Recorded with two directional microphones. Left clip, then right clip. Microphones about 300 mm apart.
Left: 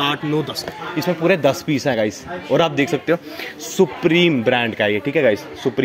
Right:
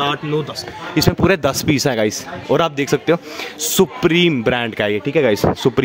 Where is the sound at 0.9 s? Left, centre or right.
Right.